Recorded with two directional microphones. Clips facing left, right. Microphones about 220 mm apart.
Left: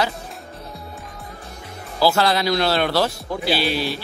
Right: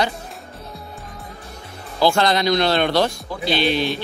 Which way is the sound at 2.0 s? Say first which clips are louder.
Right 1 dB; 5° left (ahead or behind).